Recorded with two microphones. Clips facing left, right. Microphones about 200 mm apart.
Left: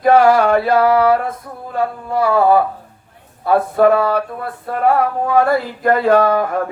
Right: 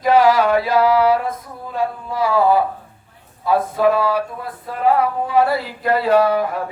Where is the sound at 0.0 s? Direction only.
55° left (ahead or behind).